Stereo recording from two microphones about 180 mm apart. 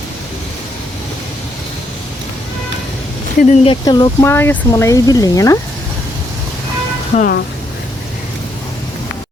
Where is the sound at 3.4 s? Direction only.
35° left (ahead or behind).